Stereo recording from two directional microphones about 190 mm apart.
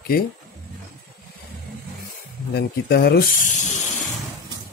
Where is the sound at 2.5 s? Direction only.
60° left (ahead or behind).